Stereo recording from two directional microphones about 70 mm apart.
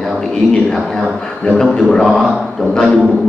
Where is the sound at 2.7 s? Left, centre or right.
Centre.